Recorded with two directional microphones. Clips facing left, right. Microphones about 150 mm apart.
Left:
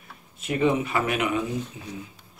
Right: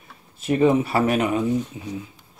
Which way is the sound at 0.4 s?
35° right (ahead or behind).